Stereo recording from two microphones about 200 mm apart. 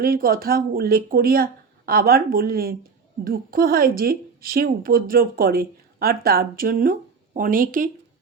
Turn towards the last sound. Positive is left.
turn(degrees=-40)  # may be behind; listen again after turning